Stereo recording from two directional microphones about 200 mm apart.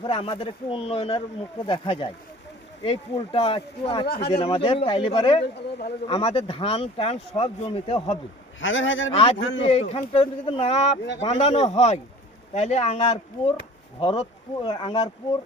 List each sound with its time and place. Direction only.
0.0 s speech: 25° left (ahead or behind)
4.0 s speech: 50° left (ahead or behind)
4.3 s speech: 25° left (ahead or behind)
8.6 s a man's voice: 70° left (ahead or behind)
9.6 s speech: 30° left (ahead or behind)